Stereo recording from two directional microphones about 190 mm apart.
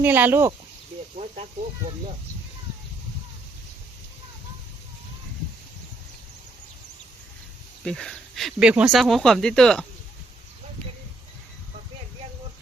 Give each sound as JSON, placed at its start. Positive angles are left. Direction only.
{"t": 0.0, "sound": "speech", "side_deg": -10}
{"t": 7.9, "sound": "speech", "side_deg": 5}